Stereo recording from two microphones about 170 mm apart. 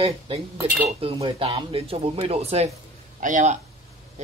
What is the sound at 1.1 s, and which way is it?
Speech, 30° right (ahead or behind).